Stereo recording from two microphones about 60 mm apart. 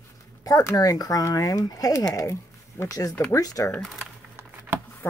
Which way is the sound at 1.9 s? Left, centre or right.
Left.